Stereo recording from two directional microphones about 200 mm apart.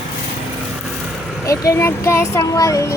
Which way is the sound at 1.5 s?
15° left (ahead or behind).